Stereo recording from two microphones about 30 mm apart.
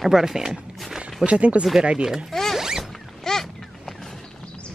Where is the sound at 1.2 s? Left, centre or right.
Right.